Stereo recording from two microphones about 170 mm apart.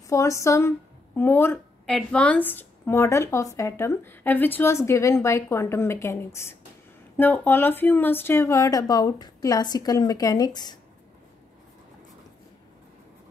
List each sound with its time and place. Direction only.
0.1 s a woman's voice: 20° left (ahead or behind)